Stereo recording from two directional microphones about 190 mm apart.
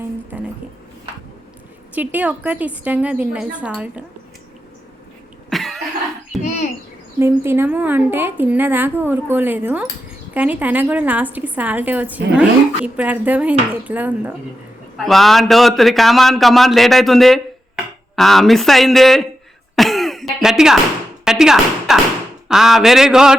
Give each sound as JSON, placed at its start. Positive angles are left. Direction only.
{"t": 0.3, "sound": "music", "side_deg": -10}
{"t": 2.0, "sound": "a woman's voice", "side_deg": -10}
{"t": 5.5, "sound": "cough", "side_deg": 0}
{"t": 6.4, "sound": "bird", "side_deg": 40}
{"t": 7.2, "sound": "a woman's voice", "side_deg": -10}
{"t": 19.7, "sound": "throat clearing", "side_deg": 0}
{"t": 21.2, "sound": "a sound", "side_deg": -5}
{"t": 22.4, "sound": "a man's voice", "side_deg": 0}